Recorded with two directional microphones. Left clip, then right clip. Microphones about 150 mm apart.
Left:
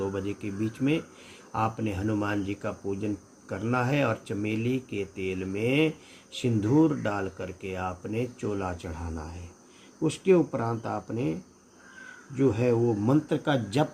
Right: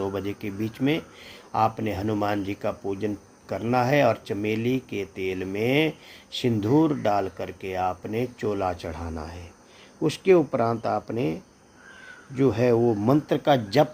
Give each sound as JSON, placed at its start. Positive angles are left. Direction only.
{"t": 0.0, "sound": "speech", "side_deg": -40}
{"t": 12.4, "sound": "speech", "side_deg": -45}